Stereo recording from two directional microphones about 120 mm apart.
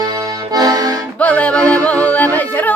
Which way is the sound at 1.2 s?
10° left (ahead or behind).